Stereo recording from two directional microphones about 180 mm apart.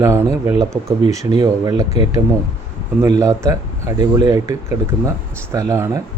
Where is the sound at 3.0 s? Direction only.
15° right (ahead or behind).